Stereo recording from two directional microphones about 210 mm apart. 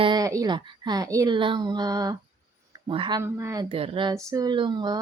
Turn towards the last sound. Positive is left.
turn(degrees=-20)  # may be behind; listen again after turning